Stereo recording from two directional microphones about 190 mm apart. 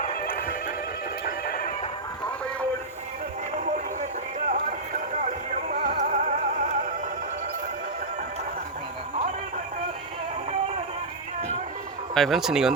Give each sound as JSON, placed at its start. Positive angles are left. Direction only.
{"t": 0.0, "sound": "music", "side_deg": 50}
{"t": 1.2, "sound": "neigh", "side_deg": 50}
{"t": 5.2, "sound": "music", "side_deg": -45}
{"t": 12.1, "sound": "speech", "side_deg": 0}